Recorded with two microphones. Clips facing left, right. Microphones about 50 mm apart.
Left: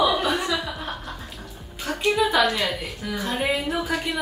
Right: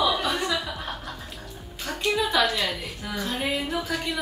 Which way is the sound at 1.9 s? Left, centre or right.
Centre.